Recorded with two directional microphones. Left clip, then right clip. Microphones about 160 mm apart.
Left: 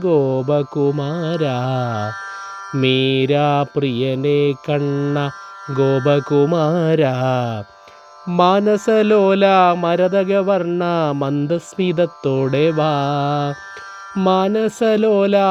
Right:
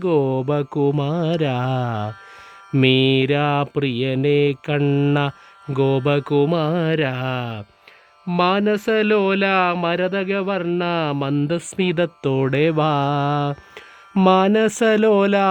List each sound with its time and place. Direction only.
0.0 s music: 10° right (ahead or behind)
4.9 s speech: 35° right (ahead or behind)
5.7 s music: 15° right (ahead or behind)
6.1 s mantra: 10° right (ahead or behind)
11.4 s music: 10° right (ahead or behind)